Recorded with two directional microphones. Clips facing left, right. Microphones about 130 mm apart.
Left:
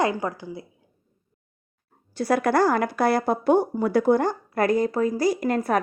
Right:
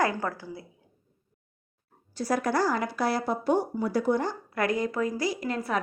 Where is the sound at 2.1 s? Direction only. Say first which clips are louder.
Left 5 dB; 65° left (ahead or behind).